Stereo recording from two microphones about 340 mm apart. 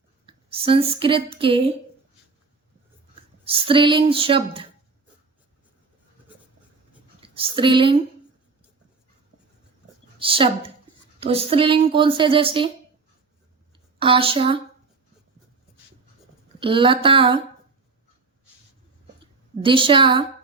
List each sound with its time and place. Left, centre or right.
0.3 s a woman's voice: centre
3.4 s a woman's voice: centre
7.2 s speech: centre
10.2 s a woman's voice: centre
13.7 s speech: centre
16.6 s a woman's voice: centre
19.6 s a woman's voice: centre